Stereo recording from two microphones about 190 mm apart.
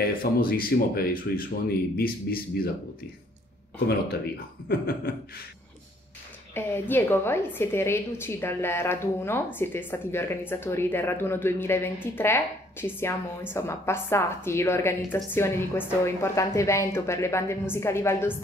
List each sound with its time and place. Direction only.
0.2 s speech: 50° left (ahead or behind)
4.6 s speech: 55° left (ahead or behind)
6.5 s a woman's voice: 10° left (ahead or behind)